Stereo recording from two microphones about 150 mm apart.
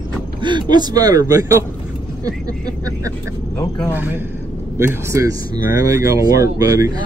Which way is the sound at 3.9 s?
15° right (ahead or behind).